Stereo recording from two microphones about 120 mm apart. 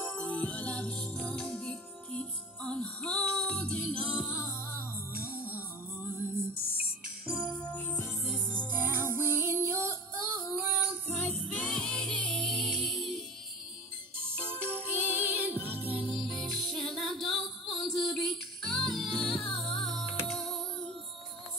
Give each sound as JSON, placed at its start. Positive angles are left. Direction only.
{"t": 0.2, "sound": "music", "side_deg": 10}
{"t": 4.4, "sound": "music", "side_deg": 20}
{"t": 5.3, "sound": "music", "side_deg": -15}
{"t": 7.7, "sound": "music", "side_deg": 15}
{"t": 8.2, "sound": "music", "side_deg": 5}
{"t": 8.7, "sound": "music", "side_deg": -20}
{"t": 11.1, "sound": "music", "side_deg": 15}
{"t": 11.3, "sound": "music", "side_deg": -55}
{"t": 11.7, "sound": "music", "side_deg": 10}
{"t": 14.3, "sound": "music", "side_deg": -20}
{"t": 16.2, "sound": "music", "side_deg": 0}